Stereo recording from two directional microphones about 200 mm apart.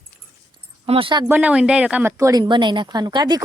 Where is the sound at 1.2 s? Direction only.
10° right (ahead or behind).